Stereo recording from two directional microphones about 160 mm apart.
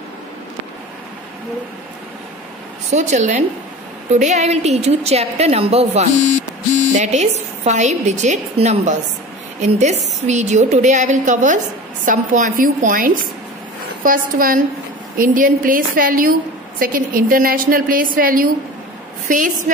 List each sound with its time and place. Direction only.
2.9 s a woman's voice: 45° right (ahead or behind)